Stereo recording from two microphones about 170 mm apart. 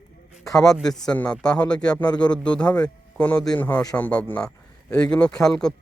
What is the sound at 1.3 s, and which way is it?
A man's voice, 5° left (ahead or behind).